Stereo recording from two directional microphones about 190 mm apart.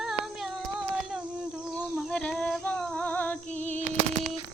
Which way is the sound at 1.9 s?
5° left (ahead or behind).